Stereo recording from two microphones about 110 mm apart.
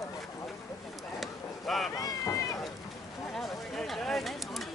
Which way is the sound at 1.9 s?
30° left (ahead or behind).